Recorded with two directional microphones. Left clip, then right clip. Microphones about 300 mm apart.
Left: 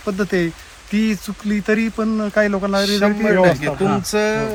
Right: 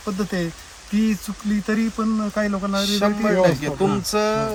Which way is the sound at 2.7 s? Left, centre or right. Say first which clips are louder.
Left 2 dB; centre.